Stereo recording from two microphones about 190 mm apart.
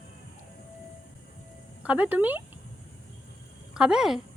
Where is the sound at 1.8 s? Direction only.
10° right (ahead or behind).